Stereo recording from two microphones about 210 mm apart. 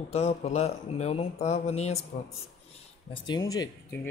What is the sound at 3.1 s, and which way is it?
Speech, 20° left (ahead or behind).